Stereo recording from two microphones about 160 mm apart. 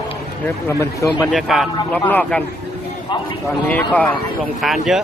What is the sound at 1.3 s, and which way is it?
Speech, centre (ahead or behind).